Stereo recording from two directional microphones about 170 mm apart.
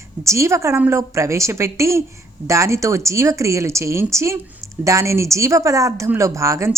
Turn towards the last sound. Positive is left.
turn(degrees=-15)  # may be behind; listen again after turning